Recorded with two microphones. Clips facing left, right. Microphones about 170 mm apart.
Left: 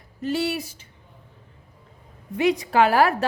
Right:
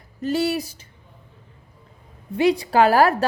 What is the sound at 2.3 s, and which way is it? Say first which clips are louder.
Speech: right 2 dB; 30° right (ahead or behind).